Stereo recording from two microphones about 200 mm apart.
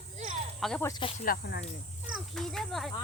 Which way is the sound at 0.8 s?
20° left (ahead or behind).